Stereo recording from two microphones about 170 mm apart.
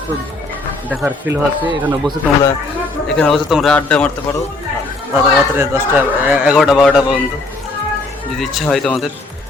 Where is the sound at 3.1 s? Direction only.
5° left (ahead or behind).